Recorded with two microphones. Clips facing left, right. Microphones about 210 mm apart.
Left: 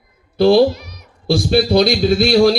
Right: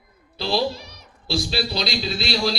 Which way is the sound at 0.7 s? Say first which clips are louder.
Left 6 dB; 30° right (ahead or behind).